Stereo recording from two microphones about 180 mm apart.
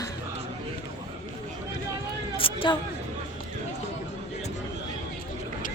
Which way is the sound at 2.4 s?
30° left (ahead or behind).